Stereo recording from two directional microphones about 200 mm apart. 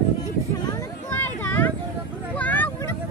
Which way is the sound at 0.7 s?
10° left (ahead or behind).